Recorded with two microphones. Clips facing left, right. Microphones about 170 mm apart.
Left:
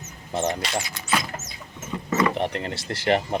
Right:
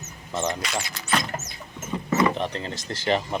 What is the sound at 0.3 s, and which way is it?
Speech, 30° left (ahead or behind).